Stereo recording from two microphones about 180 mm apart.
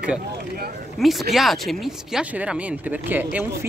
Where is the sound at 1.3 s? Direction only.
Centre (ahead or behind).